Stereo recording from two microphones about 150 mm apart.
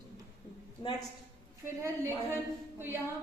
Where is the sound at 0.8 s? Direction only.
30° left (ahead or behind).